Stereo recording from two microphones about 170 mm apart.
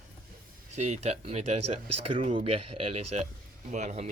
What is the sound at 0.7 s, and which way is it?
Speech, 40° right (ahead or behind).